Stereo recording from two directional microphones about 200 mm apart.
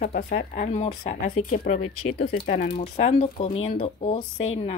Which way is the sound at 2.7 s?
30° left (ahead or behind).